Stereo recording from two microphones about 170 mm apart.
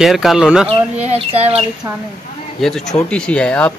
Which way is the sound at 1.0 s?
35° right (ahead or behind).